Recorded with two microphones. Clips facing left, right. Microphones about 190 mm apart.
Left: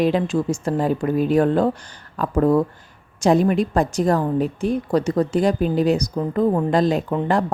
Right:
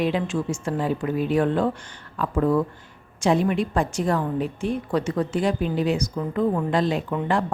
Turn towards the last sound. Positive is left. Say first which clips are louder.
# left 4 dB
turn(degrees=40)  # may be behind; listen again after turning